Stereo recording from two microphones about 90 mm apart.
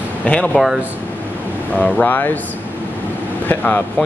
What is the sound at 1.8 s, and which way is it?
Speech, 20° left (ahead or behind).